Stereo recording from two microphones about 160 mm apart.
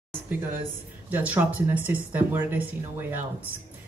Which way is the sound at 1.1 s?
10° right (ahead or behind).